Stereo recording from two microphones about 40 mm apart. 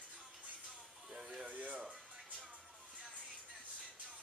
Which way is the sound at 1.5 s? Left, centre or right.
Right.